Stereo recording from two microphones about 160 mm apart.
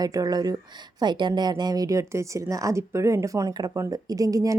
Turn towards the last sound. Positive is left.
turn(degrees=-20)  # may be behind; listen again after turning